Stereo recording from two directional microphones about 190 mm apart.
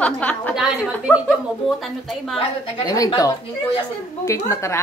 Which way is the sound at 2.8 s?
20° left (ahead or behind).